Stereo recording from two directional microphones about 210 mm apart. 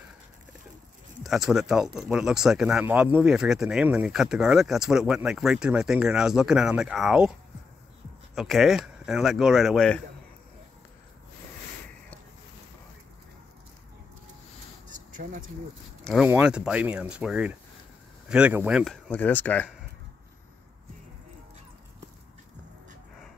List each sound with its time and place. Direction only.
1.2 s speech: centre (ahead or behind)
8.4 s speech: centre (ahead or behind)
14.9 s a sound: 40° right (ahead or behind)
16.0 s speech: centre (ahead or behind)